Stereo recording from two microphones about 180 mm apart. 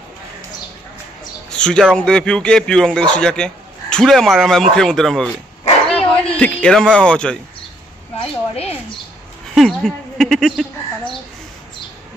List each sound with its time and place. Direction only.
1.5 s a man's voice: 5° left (ahead or behind)
8.2 s speech: 35° left (ahead or behind)
9.6 s bird: centre (ahead or behind)